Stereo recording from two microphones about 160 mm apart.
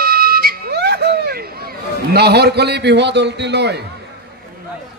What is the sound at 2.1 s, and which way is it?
A man's voice, 90° right.